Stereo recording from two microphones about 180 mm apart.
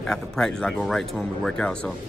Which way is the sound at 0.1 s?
5° left (ahead or behind).